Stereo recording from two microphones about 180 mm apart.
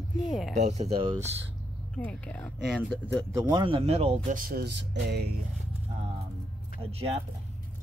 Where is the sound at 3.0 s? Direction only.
15° right (ahead or behind); by 4.3 s 35° right (ahead or behind).